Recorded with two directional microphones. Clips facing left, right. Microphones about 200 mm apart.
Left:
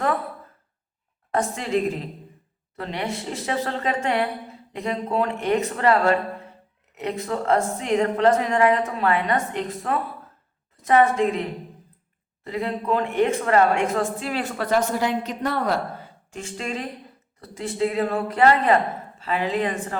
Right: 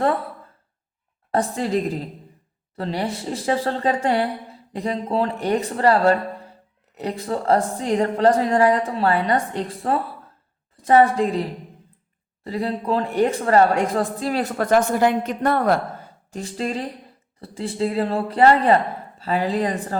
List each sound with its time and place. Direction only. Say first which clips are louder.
1.3 s a woman's voice: right 2 dB; 35° right (ahead or behind)
12.5 s a woman's voice: right 1 dB; 35° right (ahead or behind)